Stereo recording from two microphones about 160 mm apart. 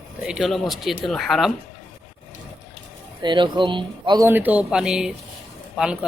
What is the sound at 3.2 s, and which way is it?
Speech, 30° right (ahead or behind).